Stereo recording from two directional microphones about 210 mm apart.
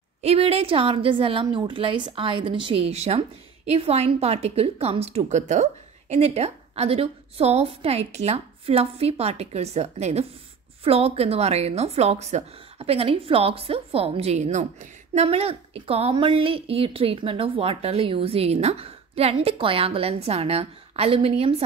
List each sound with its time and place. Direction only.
0.2 s speech: 30° right (ahead or behind)